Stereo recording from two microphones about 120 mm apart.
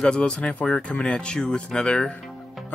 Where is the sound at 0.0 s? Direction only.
10° left (ahead or behind).